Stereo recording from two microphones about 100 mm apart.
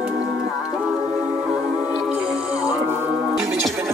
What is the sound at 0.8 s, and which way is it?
Music, 10° right (ahead or behind).